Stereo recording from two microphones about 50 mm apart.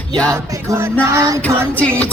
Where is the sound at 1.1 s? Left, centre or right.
Right.